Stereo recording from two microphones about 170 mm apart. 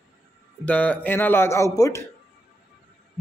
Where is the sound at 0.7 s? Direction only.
10° left (ahead or behind).